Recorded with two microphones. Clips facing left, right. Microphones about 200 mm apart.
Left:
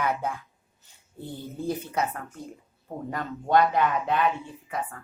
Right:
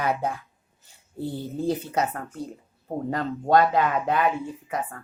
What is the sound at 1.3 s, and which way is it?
Speech, 10° right (ahead or behind).